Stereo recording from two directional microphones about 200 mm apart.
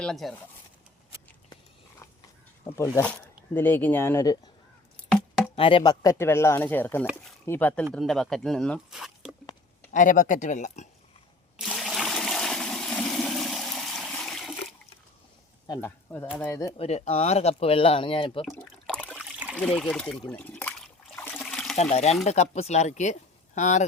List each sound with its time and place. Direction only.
0.0 s speech: centre (ahead or behind)
2.7 s speech: 10° left (ahead or behind)
4.9 s a sound: 5° left (ahead or behind)
5.5 s speech: 25° left (ahead or behind); by 9.3 s centre (ahead or behind)
9.9 s speech: 40° left (ahead or behind)
11.5 s toilet flush: centre (ahead or behind)
15.6 s speech: 15° left (ahead or behind)
16.7 s speech: 30° left (ahead or behind)
18.4 s a sound: 5° left (ahead or behind)
19.1 s splash: 5° right (ahead or behind)
19.5 s trickle: 5° left (ahead or behind)
21.8 s speech: 35° left (ahead or behind)